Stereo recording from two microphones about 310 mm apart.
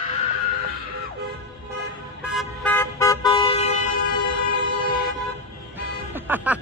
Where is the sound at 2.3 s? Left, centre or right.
Centre.